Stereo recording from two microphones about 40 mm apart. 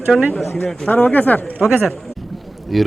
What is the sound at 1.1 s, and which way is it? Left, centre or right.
Speech, left.